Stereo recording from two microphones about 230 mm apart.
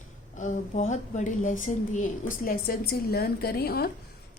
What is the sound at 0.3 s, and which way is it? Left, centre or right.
A woman's voice, left.